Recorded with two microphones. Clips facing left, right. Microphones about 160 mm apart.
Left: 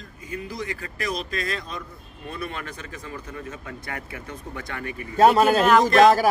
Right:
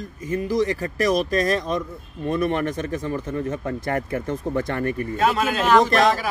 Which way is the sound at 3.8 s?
45° right (ahead or behind).